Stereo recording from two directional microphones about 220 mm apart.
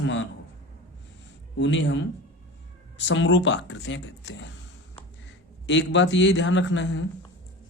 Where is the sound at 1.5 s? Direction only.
55° left (ahead or behind).